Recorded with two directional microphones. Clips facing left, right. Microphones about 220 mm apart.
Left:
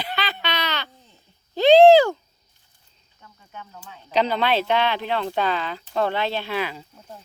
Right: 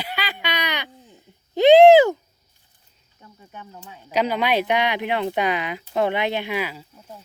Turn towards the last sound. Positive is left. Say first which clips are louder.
# even
turn(degrees=-5)  # may be behind; listen again after turning